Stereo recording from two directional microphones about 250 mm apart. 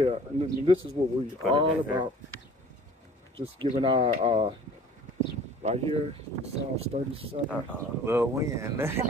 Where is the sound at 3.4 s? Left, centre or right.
Right.